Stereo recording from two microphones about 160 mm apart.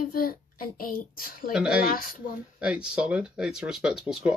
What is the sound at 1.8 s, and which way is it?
Speech, 60° left (ahead or behind).